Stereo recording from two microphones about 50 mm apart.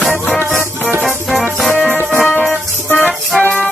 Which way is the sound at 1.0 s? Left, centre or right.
Centre.